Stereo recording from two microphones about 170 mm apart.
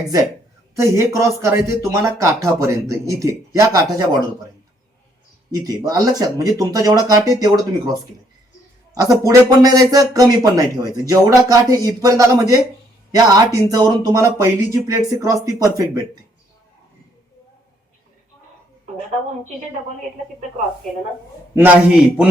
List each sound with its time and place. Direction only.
0.8 s speech: 20° right (ahead or behind)
5.5 s speech: 20° right (ahead or behind)
9.0 s speech: 20° right (ahead or behind)
21.5 s speech: 10° right (ahead or behind)